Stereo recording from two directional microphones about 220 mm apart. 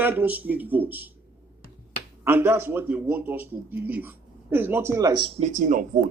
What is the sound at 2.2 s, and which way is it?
Speech, 10° right (ahead or behind).